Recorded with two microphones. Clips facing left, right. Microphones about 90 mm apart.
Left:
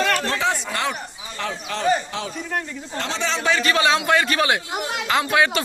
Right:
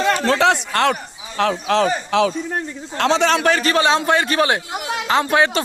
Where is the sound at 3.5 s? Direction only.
40° right (ahead or behind).